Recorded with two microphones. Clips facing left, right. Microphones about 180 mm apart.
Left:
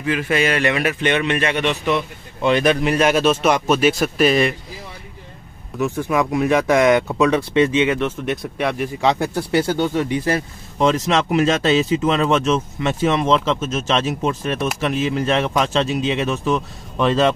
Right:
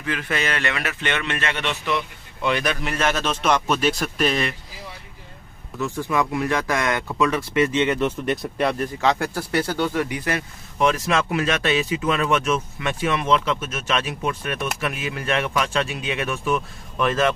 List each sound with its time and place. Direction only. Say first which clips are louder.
0.0 s a man's voice: left 7 dB; 10° left (ahead or behind)
5.8 s speech: left 4 dB; 20° left (ahead or behind)
8.3 s speech: even; centre (ahead or behind)
8.7 s speech: left 3 dB; 15° left (ahead or behind)